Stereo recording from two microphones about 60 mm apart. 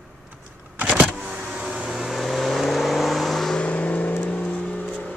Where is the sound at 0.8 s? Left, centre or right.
Right; by 3.6 s centre.